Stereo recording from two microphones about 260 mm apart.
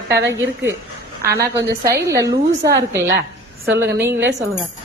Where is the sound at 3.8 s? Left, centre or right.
Right.